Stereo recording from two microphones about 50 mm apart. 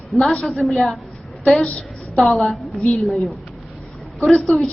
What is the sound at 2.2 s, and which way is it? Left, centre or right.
A woman's voice, centre.